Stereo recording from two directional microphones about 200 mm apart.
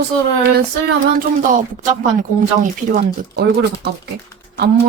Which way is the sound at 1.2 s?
40° right (ahead or behind).